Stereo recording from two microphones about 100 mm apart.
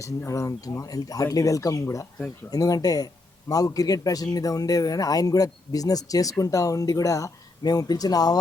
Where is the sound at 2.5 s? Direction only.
40° left (ahead or behind).